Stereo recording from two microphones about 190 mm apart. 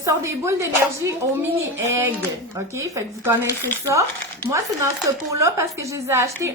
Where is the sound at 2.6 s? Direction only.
15° right (ahead or behind).